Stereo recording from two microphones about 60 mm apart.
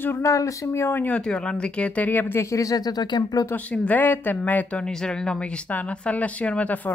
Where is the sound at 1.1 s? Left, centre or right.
Centre; by 2.4 s left.